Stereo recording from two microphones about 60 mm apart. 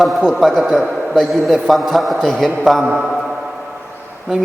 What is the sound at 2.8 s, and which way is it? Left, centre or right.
Speech, centre.